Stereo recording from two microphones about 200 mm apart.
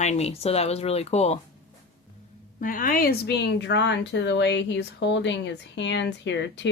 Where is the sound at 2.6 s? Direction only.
45° left (ahead or behind).